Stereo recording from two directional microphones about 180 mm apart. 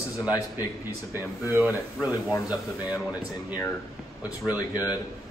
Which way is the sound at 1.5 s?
10° right (ahead or behind).